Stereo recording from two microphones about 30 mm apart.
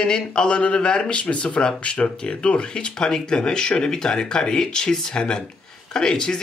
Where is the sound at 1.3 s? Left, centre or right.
Left.